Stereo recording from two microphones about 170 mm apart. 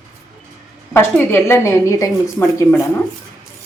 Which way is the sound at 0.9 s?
10° left (ahead or behind).